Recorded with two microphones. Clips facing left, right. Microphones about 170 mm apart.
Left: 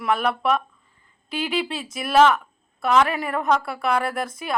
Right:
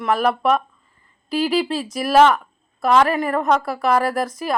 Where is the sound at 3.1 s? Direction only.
Centre (ahead or behind).